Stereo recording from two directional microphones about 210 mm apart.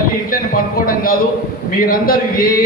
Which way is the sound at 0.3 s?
45° left (ahead or behind).